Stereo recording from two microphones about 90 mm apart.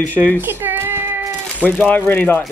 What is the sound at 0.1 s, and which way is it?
Speech, 20° left (ahead or behind).